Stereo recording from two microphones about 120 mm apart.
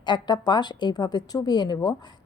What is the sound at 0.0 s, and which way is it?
A woman's voice, 40° left (ahead or behind).